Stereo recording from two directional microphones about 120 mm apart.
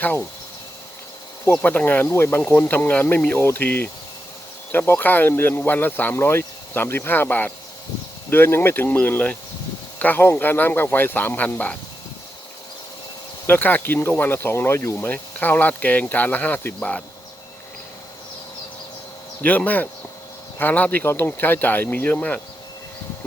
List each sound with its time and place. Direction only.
0.0 s speech: 15° left (ahead or behind)
1.6 s speech: 15° left (ahead or behind)
13.5 s speech: 15° left (ahead or behind)
19.4 s speech: 15° left (ahead or behind)